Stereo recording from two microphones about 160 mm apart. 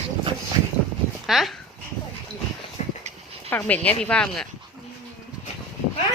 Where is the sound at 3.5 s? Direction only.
10° left (ahead or behind).